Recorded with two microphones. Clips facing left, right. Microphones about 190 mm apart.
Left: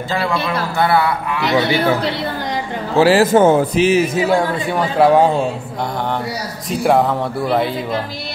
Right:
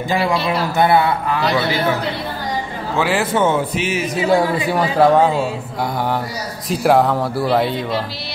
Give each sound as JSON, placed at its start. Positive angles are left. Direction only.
{"t": 0.5, "sound": "speech", "side_deg": -20}
{"t": 3.0, "sound": "a man's voice", "side_deg": 35}
{"t": 4.3, "sound": "speech", "side_deg": -5}
{"t": 6.7, "sound": "speech", "side_deg": 0}